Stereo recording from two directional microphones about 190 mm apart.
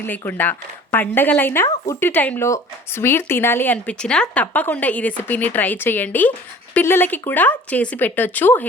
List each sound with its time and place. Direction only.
0.3 s speech: 10° left (ahead or behind)